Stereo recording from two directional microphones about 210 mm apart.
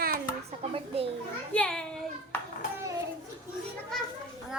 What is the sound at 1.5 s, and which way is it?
Speech, 5° left (ahead or behind).